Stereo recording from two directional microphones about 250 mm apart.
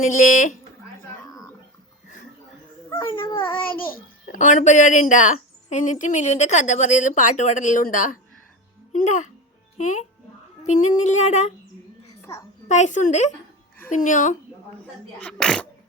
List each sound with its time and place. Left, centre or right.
0.0 s speech: left
2.9 s speech: centre
3.8 s a child's voice: left
12.6 s speech: left
15.2 s speech: centre